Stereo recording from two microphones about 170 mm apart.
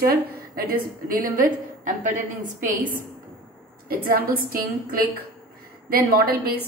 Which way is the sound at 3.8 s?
60° right (ahead or behind).